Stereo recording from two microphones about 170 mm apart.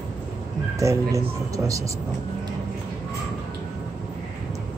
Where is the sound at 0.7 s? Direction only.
20° right (ahead or behind).